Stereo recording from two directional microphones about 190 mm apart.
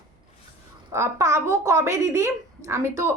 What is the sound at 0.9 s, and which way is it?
A woman's voice, 15° right (ahead or behind).